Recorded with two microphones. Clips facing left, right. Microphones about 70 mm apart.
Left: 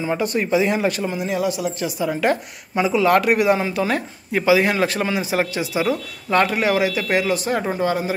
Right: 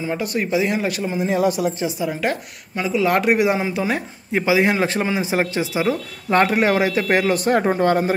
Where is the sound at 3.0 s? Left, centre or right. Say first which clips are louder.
Even; centre.